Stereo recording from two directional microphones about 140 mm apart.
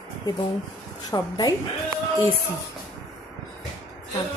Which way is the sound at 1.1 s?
25° left (ahead or behind).